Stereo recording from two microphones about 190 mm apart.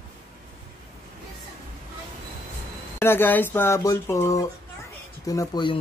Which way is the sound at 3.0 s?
10° left (ahead or behind).